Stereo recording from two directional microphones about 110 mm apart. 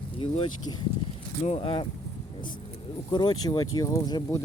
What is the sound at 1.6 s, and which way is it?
Speech, 50° left (ahead or behind).